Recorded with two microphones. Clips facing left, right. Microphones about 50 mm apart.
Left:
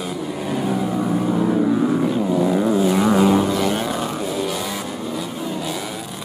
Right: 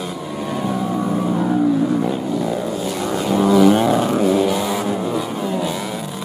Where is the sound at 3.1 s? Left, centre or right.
Centre.